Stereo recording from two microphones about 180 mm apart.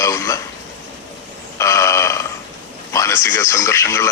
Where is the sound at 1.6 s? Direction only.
15° left (ahead or behind).